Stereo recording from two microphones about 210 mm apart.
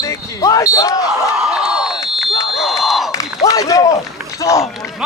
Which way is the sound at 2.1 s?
Centre (ahead or behind).